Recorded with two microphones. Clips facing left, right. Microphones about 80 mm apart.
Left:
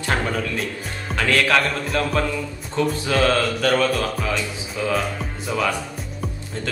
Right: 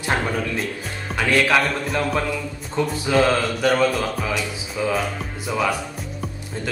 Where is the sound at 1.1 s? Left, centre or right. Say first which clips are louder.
Right 1 dB; centre.